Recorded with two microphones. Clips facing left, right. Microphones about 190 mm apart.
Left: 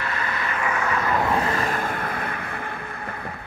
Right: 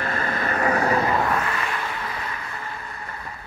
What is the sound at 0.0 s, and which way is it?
Vehicle, 45° right (ahead or behind).